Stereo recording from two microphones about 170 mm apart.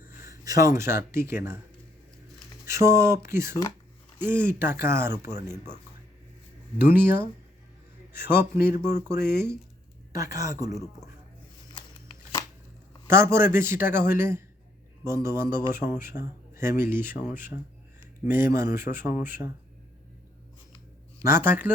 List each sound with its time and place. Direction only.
0.0 s speech: 15° right (ahead or behind)
2.6 s a man's voice: 15° right (ahead or behind)
6.7 s a man's voice: 10° right (ahead or behind)
13.1 s a man's voice: 15° right (ahead or behind)
21.2 s a man's voice: 15° right (ahead or behind)